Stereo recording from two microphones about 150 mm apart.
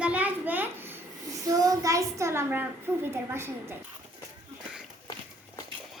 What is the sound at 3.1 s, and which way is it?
Speech, 15° right (ahead or behind).